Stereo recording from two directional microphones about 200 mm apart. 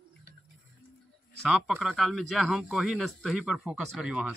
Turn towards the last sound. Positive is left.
turn(degrees=-5)  # may be behind; listen again after turning